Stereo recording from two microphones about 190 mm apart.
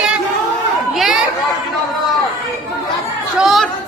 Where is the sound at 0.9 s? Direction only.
Centre (ahead or behind).